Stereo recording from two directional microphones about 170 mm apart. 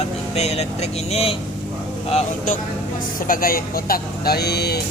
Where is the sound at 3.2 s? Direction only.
55° left (ahead or behind).